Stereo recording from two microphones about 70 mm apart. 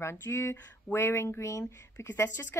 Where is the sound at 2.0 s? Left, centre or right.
Left.